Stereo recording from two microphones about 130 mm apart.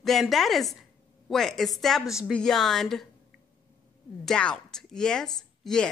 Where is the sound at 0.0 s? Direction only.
Centre (ahead or behind).